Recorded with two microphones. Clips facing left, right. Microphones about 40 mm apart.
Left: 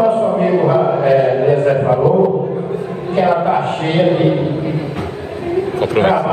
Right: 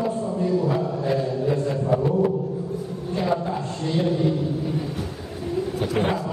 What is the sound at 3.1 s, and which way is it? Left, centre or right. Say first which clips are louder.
Chant: left 11 dB; left.